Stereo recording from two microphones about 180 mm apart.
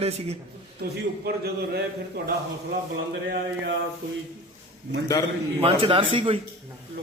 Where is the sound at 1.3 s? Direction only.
60° right (ahead or behind).